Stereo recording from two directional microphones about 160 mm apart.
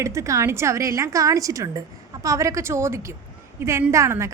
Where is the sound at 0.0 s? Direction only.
20° right (ahead or behind).